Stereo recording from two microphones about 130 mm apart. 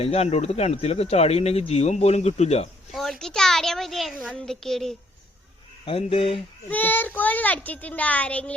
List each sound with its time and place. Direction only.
0.0 s speech: 50° left (ahead or behind)
2.9 s a child's voice: centre (ahead or behind)
5.8 s speech: 50° left (ahead or behind)
6.7 s a child's voice: 15° left (ahead or behind)